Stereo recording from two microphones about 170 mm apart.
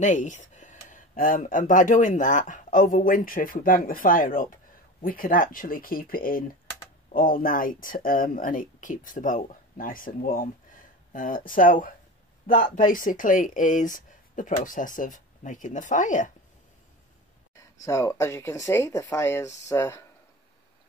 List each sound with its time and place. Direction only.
0.0 s speech: 45° left (ahead or behind)
17.6 s speech: 20° left (ahead or behind)